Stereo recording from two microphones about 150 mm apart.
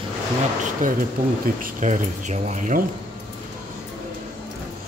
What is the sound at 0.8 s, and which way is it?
Speech, 60° right (ahead or behind).